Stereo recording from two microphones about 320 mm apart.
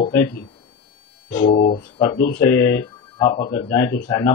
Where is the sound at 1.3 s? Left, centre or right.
Left.